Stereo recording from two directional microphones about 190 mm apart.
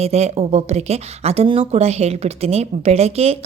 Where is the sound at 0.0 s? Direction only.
35° right (ahead or behind).